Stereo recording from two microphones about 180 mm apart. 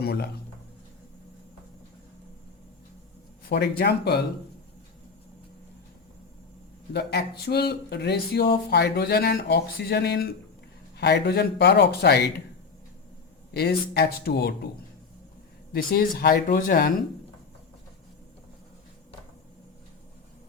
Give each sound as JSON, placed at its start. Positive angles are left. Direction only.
{"t": 0.0, "sound": "speech", "side_deg": 65}
{"t": 3.5, "sound": "speech", "side_deg": 65}
{"t": 6.9, "sound": "speech", "side_deg": 65}
{"t": 13.5, "sound": "speech", "side_deg": 60}
{"t": 15.7, "sound": "speech", "side_deg": 55}